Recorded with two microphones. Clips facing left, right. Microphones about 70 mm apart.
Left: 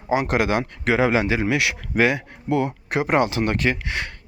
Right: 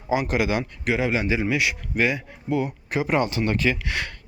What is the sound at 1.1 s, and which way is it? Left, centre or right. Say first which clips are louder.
Speech: left 3 dB; left.